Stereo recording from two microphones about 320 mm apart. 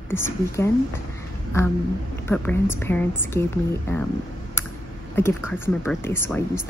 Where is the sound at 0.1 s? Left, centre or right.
Centre.